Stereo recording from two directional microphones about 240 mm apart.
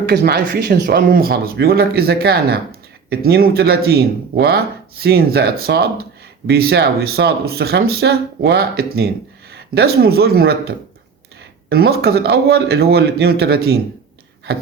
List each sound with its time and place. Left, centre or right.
0.0 s speech: right